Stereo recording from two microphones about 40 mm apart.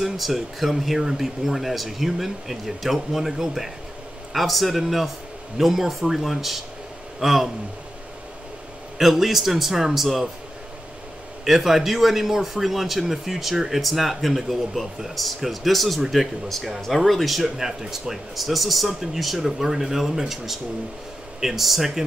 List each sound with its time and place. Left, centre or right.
0.0 s speech: centre
8.9 s speech: centre
11.4 s speech: centre
17.4 s speech: centre